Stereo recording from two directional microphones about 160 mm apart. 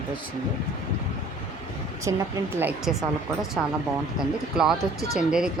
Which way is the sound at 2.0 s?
15° right (ahead or behind).